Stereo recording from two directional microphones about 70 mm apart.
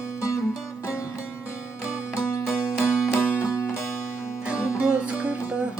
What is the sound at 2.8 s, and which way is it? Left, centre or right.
Music, left.